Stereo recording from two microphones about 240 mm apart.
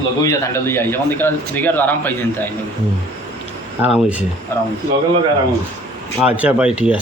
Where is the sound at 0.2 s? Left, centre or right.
Centre.